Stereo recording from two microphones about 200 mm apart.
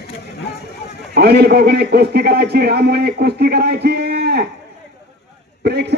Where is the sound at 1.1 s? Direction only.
55° right (ahead or behind).